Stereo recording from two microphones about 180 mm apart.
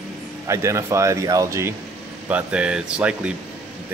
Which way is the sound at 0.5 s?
15° right (ahead or behind).